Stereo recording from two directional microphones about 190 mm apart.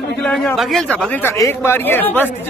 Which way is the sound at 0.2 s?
5° left (ahead or behind).